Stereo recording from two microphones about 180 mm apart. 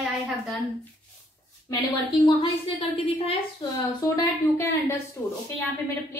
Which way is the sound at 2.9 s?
35° left (ahead or behind).